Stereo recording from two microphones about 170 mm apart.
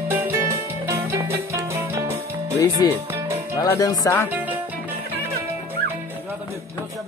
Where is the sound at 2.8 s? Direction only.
20° left (ahead or behind).